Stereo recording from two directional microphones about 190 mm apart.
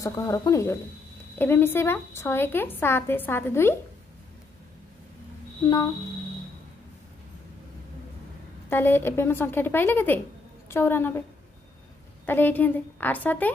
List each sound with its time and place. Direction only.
0.0 s a woman's voice: 15° left (ahead or behind)
8.6 s a woman's voice: 10° left (ahead or behind)
12.3 s a woman's voice: 10° left (ahead or behind)